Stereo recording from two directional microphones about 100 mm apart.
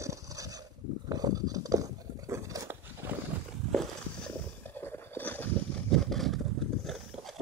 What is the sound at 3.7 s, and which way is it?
Walk, 5° left (ahead or behind).